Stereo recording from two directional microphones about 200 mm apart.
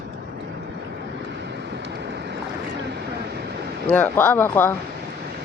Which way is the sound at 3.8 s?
10° left (ahead or behind).